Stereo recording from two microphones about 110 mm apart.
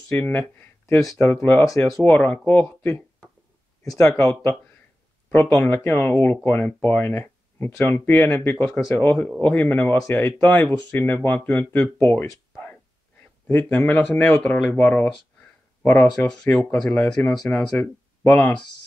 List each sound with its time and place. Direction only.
0.1 s speech: 15° left (ahead or behind)
3.8 s speech: 30° left (ahead or behind)
13.5 s speech: 20° left (ahead or behind)